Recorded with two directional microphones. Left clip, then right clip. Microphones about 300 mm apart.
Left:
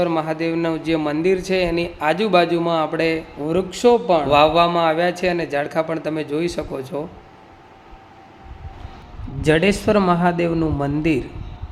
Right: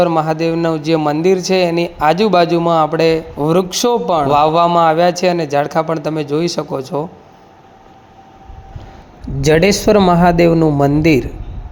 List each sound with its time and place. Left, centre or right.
0.0 s speech: centre
9.4 s speech: centre